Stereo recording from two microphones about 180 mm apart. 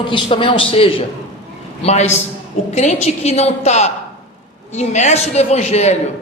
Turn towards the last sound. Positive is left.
turn(degrees=35)  # may be behind; listen again after turning